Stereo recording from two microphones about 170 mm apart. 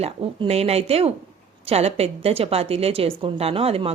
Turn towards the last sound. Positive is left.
turn(degrees=-35)  # may be behind; listen again after turning